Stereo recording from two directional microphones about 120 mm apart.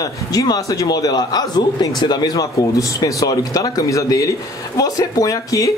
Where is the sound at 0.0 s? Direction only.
30° left (ahead or behind).